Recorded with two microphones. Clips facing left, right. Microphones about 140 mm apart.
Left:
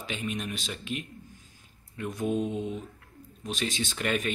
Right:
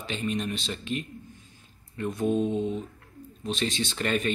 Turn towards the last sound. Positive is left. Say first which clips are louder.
# right 2 dB
turn(degrees=10)  # may be behind; listen again after turning